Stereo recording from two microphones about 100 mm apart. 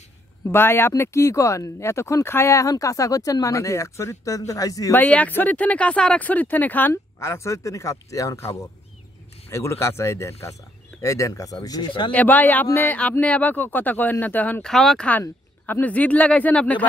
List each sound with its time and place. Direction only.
0.5 s speech: 25° left (ahead or behind)
4.9 s speech: 15° left (ahead or behind)
6.9 s speech: 30° left (ahead or behind)
12.1 s speech: 15° left (ahead or behind)
14.6 s speech: 5° left (ahead or behind)
15.0 s speech: 20° left (ahead or behind)